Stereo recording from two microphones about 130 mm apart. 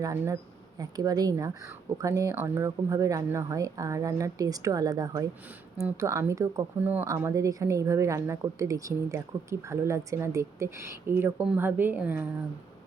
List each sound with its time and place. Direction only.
0.0 s speech: 25° right (ahead or behind)
6.7 s a woman's voice: 15° right (ahead or behind)